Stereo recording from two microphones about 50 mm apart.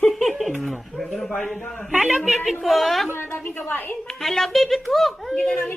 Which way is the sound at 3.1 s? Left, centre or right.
Left.